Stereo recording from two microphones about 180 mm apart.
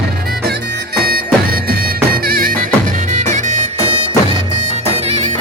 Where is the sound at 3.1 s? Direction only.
40° right (ahead or behind).